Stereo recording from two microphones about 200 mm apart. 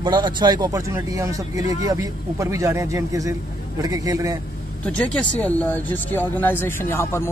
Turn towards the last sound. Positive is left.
turn(degrees=15)  # may be behind; listen again after turning